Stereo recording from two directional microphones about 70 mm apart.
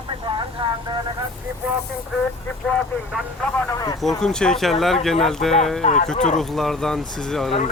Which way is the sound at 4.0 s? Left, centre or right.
Centre.